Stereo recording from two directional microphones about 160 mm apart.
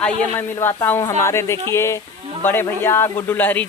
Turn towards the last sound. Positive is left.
turn(degrees=10)  # may be behind; listen again after turning